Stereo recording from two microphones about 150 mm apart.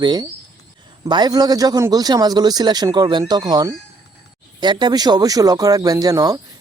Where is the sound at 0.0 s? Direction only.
30° right (ahead or behind).